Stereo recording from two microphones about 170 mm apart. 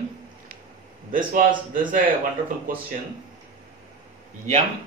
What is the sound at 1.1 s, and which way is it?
Speech, 55° right (ahead or behind).